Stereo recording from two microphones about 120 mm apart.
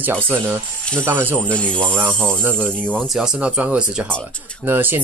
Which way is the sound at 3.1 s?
5° right (ahead or behind).